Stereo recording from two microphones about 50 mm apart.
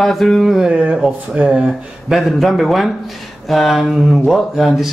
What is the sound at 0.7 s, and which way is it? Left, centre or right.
Speech, right.